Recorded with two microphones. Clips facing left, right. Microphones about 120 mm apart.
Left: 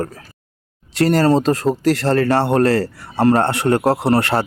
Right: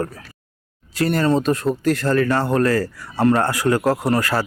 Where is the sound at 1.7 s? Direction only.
90° left.